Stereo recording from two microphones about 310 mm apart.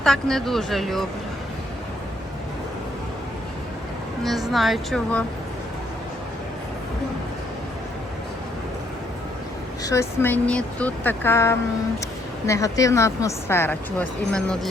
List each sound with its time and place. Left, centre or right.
0.0 s speech: centre
4.2 s speech: centre
9.8 s speech: centre